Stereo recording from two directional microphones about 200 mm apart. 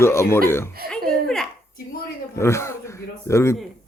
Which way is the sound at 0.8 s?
50° right (ahead or behind).